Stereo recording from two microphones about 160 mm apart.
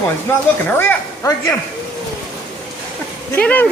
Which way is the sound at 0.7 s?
20° left (ahead or behind).